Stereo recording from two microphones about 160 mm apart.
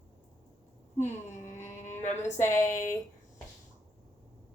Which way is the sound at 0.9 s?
50° left (ahead or behind).